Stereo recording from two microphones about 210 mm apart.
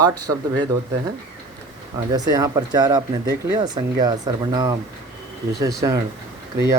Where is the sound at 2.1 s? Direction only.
20° right (ahead or behind).